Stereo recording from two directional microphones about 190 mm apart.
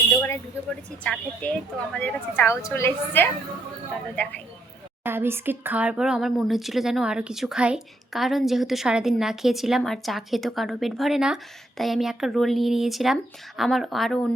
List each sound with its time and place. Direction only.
0.2 s speech: 5° left (ahead or behind)
5.0 s speech: 10° right (ahead or behind)